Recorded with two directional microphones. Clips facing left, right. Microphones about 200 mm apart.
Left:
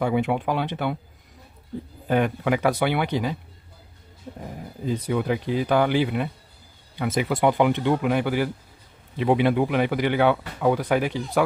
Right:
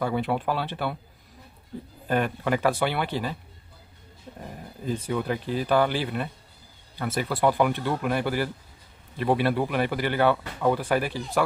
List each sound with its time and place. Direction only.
0.0 s speech: 15° left (ahead or behind)
2.0 s speech: 15° left (ahead or behind)
4.8 s speech: 15° left (ahead or behind)